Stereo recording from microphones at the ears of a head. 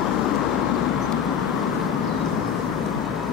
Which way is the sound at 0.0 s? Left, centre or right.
Left.